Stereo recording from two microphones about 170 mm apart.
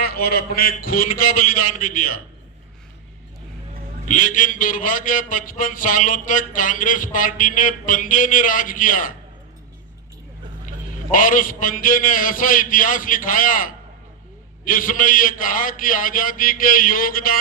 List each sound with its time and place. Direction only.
0.0 s a man's voice: 65° left (ahead or behind)
4.1 s a man's voice: 50° left (ahead or behind)
11.1 s a man's voice: 50° left (ahead or behind)